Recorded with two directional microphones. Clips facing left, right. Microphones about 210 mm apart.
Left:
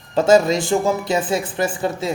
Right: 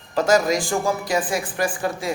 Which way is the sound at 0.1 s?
25° left (ahead or behind).